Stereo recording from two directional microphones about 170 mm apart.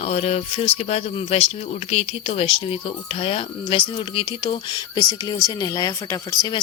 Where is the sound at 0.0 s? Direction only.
40° left (ahead or behind).